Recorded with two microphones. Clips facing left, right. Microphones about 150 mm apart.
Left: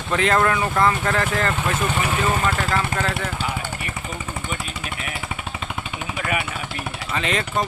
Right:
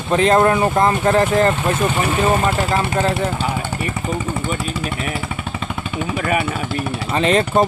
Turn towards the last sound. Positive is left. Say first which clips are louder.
# right 8 dB
turn(degrees=-30)  # may be behind; listen again after turning